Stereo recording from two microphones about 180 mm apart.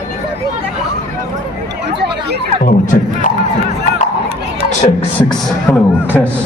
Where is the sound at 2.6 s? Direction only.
45° left (ahead or behind).